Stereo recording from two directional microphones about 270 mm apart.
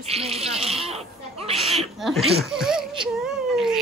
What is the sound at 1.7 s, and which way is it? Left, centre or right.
Chuckle, centre.